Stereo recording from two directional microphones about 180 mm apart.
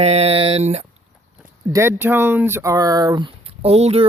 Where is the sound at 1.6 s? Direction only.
15° right (ahead or behind).